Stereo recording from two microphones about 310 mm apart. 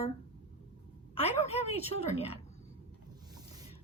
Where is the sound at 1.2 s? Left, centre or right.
Centre.